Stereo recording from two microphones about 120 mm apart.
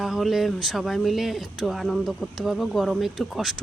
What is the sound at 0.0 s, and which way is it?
Speech, centre (ahead or behind).